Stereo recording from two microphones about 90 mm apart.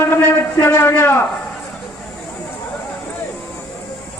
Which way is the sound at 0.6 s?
25° left (ahead or behind).